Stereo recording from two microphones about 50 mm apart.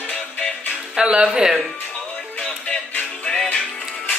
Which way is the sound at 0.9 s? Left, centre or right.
Centre.